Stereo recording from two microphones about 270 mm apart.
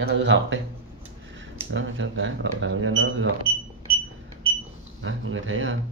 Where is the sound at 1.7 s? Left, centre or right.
Right.